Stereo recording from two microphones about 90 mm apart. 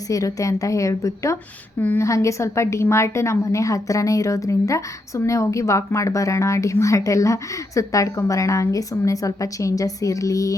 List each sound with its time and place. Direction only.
0.1 s a woman's voice: 40° left (ahead or behind)